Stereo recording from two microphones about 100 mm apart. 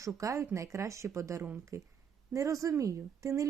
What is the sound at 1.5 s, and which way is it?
Speech, 20° right (ahead or behind).